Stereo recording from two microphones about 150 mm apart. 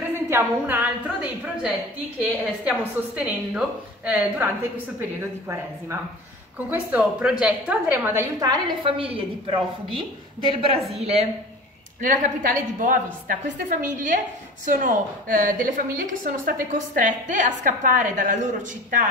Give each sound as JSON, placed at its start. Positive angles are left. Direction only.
{"t": 0.1, "sound": "a woman's voice", "side_deg": -15}
{"t": 6.7, "sound": "a woman's voice", "side_deg": -10}
{"t": 8.8, "sound": "a woman's voice", "side_deg": -40}
{"t": 12.0, "sound": "a woman's voice", "side_deg": -60}